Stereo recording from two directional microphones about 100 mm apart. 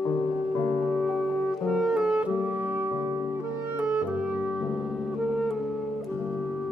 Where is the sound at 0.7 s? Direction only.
5° left (ahead or behind); by 3.8 s 25° right (ahead or behind).